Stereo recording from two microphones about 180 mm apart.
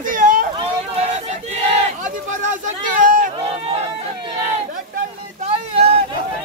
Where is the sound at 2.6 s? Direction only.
50° right (ahead or behind).